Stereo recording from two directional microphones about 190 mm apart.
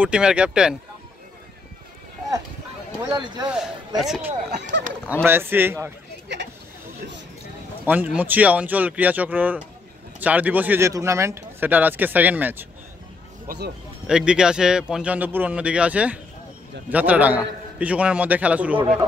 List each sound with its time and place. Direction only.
0.0 s a man's voice: 5° right (ahead or behind)
3.0 s speech: 20° right (ahead or behind)
4.0 s a man's voice: 5° right (ahead or behind)
4.6 s speech: 70° right (ahead or behind)
5.2 s speech: 10° right (ahead or behind)
6.2 s a sound: 65° right (ahead or behind)
7.8 s speech: 10° right (ahead or behind)
14.0 s a man's voice: 5° right (ahead or behind)